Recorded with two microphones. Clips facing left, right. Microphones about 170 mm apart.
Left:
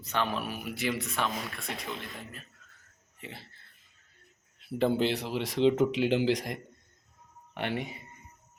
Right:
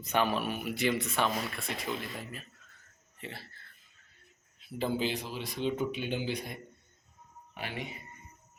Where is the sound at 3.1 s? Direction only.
15° left (ahead or behind).